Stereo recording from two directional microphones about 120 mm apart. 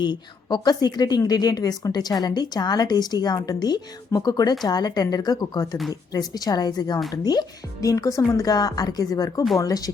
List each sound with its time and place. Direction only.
0.0 s a woman's voice: 40° left (ahead or behind)